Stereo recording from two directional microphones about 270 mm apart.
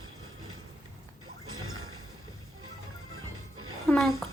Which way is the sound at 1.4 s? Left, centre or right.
Right.